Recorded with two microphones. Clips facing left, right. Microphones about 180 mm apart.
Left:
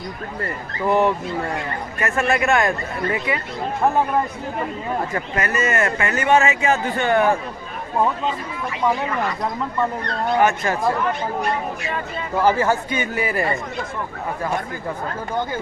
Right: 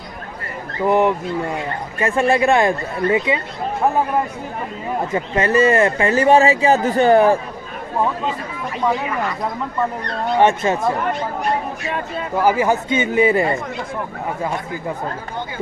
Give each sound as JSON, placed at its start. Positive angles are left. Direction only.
{"t": 0.8, "sound": "speech", "side_deg": -15}
{"t": 2.0, "sound": "speech", "side_deg": -30}
{"t": 5.1, "sound": "speech", "side_deg": -25}
{"t": 10.4, "sound": "speech", "side_deg": -25}
{"t": 12.4, "sound": "speech", "side_deg": -10}
{"t": 12.9, "sound": "speech", "side_deg": -25}